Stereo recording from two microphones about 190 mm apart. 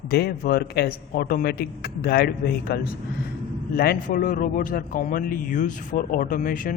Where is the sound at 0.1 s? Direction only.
55° left (ahead or behind).